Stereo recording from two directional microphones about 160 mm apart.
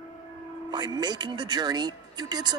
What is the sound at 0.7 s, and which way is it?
Speech, 25° right (ahead or behind).